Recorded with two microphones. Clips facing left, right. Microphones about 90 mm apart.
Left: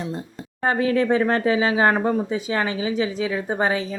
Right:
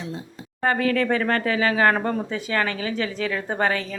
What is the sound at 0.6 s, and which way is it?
Speech, 20° left (ahead or behind).